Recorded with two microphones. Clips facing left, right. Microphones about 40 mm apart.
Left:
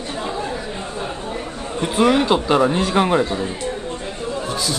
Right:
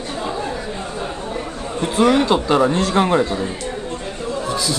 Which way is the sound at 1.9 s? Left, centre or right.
Centre.